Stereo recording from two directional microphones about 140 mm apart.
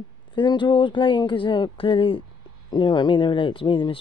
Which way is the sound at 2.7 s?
35° left (ahead or behind).